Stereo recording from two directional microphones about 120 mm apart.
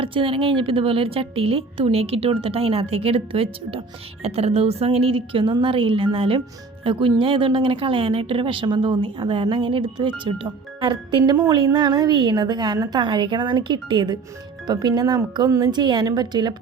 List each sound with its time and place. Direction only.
0.0 s a woman's voice: 45° right (ahead or behind)